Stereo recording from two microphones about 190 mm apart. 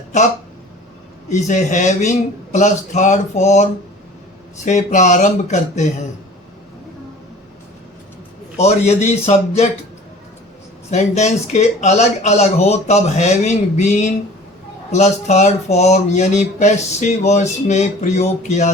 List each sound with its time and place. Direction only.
1.3 s speech: 40° left (ahead or behind)
8.5 s speech: 35° left (ahead or behind)
10.9 s speech: 35° left (ahead or behind)